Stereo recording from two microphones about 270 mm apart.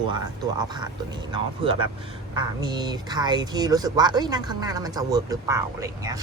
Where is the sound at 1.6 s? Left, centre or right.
Centre.